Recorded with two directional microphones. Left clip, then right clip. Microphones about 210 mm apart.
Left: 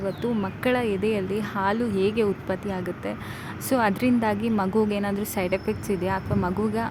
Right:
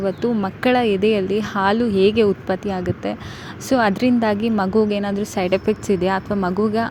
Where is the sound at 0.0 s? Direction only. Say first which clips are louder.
Right 6 dB; 20° right (ahead or behind).